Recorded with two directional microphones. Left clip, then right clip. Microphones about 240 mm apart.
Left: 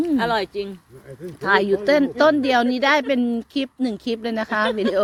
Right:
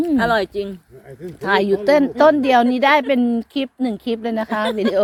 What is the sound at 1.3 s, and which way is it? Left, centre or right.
A woman's voice, centre.